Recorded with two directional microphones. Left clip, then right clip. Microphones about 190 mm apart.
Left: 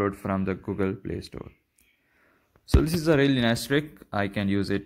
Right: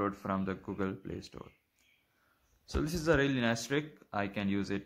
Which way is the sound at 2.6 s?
15° left (ahead or behind).